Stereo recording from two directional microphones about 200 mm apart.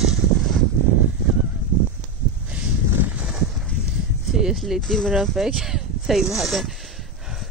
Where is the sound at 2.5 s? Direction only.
10° right (ahead or behind).